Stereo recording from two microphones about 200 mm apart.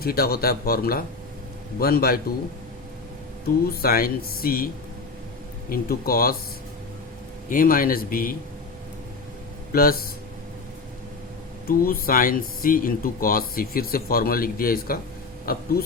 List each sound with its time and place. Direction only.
0.0 s speech: 50° left (ahead or behind)
3.7 s speech: 50° left (ahead or behind)
7.5 s speech: 45° left (ahead or behind)
9.7 s speech: 50° left (ahead or behind)
11.7 s speech: 45° left (ahead or behind)